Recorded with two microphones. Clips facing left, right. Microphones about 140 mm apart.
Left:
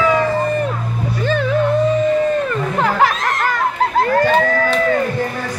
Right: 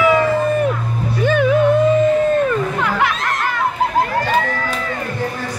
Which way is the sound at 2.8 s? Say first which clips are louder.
Left 3 dB; 40° left (ahead or behind).